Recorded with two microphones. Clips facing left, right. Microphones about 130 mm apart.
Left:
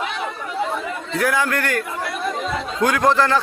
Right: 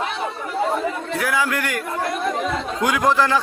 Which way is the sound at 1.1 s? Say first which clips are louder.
Left 4 dB; 5° right (ahead or behind).